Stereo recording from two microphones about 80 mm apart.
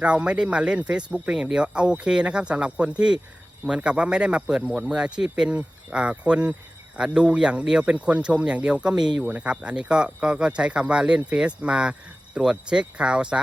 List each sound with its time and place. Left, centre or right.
0.0 s speech: centre